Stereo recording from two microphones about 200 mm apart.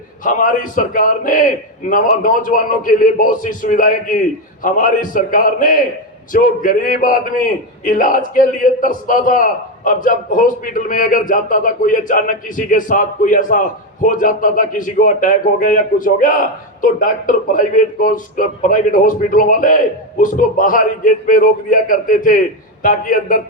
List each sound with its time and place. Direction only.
0.3 s a man's voice: 40° left (ahead or behind)